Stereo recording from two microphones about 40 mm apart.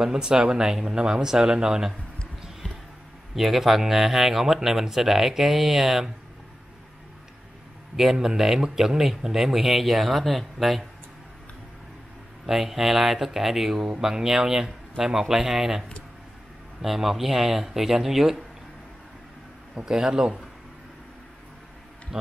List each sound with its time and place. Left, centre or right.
0.0 s speech: centre
3.3 s speech: centre
7.9 s speech: centre
12.4 s speech: centre
16.8 s speech: centre
19.7 s a man's voice: centre